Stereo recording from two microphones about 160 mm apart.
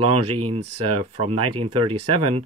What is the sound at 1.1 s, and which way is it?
Speech, 40° right (ahead or behind).